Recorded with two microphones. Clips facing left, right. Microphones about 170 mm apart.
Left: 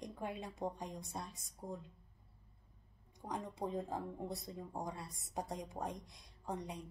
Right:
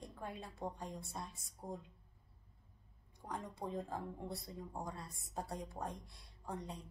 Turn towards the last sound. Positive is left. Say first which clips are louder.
# left 2 dB
turn(degrees=20)  # may be behind; listen again after turning